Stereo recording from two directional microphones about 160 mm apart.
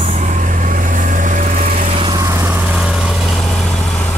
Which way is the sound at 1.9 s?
35° right (ahead or behind).